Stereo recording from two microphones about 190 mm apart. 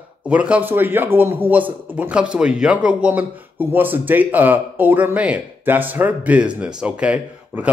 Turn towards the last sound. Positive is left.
turn(degrees=-5)  # may be behind; listen again after turning